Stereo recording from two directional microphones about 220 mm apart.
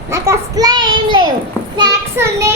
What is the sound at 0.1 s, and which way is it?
Child singing, 15° right (ahead or behind).